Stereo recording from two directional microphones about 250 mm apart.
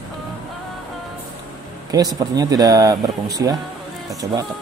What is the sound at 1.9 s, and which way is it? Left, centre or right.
Speech, centre.